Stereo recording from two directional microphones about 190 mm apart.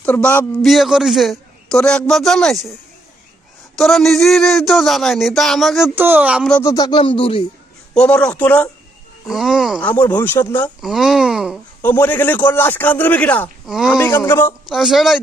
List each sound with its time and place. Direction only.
0.0 s a man's voice: 5° left (ahead or behind)
3.8 s a man's voice: centre (ahead or behind)
6.5 s speech: 15° left (ahead or behind)
7.9 s a man's voice: 5° left (ahead or behind)
9.9 s a man's voice: 10° left (ahead or behind)
10.8 s speech: centre (ahead or behind)
11.8 s a man's voice: 10° left (ahead or behind)
14.0 s a man's voice: 10° left (ahead or behind)
14.7 s a man's voice: centre (ahead or behind)